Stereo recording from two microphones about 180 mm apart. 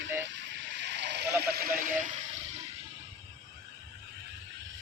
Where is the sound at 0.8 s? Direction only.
75° right (ahead or behind).